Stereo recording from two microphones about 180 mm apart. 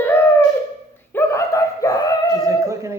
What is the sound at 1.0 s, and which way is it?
Dog, 15° left (ahead or behind).